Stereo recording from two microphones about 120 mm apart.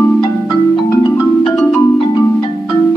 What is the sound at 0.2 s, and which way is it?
Marimba, 35° left (ahead or behind).